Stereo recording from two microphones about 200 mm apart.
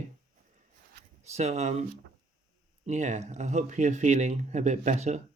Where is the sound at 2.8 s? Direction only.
35° right (ahead or behind).